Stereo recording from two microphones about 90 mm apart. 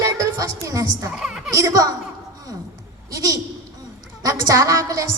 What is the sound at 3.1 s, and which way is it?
A woman's voice, 35° right (ahead or behind).